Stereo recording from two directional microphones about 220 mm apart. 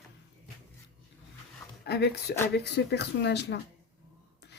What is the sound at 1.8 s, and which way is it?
Speech, 50° left (ahead or behind).